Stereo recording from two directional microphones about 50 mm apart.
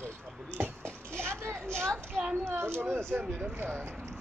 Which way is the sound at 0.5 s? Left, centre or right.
Right.